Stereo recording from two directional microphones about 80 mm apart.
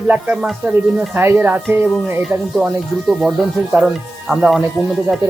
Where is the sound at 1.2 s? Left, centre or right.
Right.